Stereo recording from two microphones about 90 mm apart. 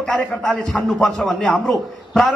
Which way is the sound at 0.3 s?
5° left (ahead or behind).